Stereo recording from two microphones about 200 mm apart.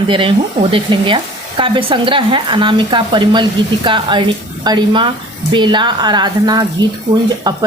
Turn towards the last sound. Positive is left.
turn(degrees=-20)  # may be behind; listen again after turning